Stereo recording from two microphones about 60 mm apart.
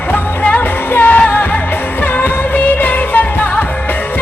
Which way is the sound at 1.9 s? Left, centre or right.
Left.